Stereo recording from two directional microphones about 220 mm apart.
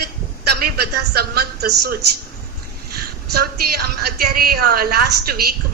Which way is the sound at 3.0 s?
45° right (ahead or behind).